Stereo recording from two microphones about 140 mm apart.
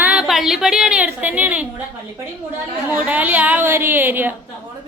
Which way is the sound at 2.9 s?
10° right (ahead or behind).